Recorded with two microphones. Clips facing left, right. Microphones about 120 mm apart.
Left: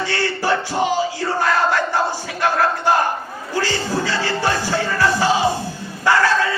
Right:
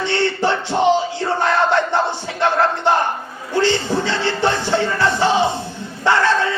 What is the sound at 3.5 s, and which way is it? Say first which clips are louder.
Music: right 4 dB; 25° right (ahead or behind).